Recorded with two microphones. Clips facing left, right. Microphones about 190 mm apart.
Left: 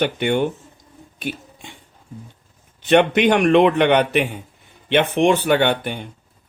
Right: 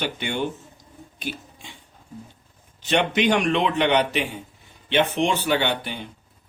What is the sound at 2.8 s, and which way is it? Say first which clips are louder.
Speech: left 6 dB; 55° left (ahead or behind).